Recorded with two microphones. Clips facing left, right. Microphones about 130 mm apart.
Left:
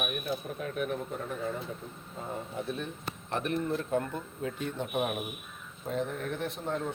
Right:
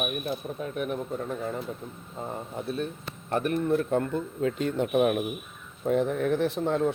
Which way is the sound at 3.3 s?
50° right (ahead or behind).